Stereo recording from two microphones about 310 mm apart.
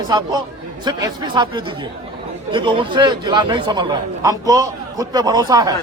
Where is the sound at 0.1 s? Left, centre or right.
Centre.